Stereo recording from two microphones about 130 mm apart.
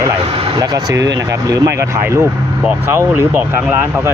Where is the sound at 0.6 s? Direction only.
30° right (ahead or behind).